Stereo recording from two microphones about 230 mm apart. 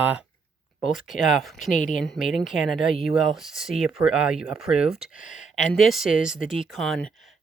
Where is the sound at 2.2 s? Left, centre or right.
Centre.